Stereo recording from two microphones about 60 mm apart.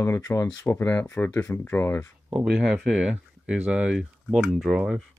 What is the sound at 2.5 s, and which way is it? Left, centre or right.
Speech, centre.